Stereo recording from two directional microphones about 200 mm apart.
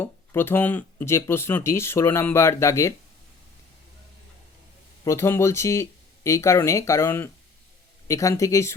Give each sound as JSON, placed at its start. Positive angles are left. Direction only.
{"t": 0.0, "sound": "speech", "side_deg": 10}
{"t": 5.0, "sound": "speech", "side_deg": 15}